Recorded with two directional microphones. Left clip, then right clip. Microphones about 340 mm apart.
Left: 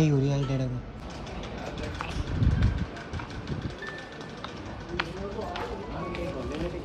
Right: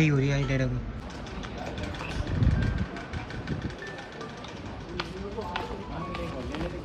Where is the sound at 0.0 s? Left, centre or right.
Centre.